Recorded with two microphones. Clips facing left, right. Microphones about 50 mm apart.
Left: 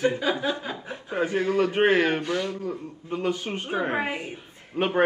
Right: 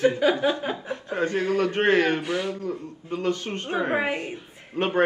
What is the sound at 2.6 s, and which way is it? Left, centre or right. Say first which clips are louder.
Speech: right 1 dB; centre.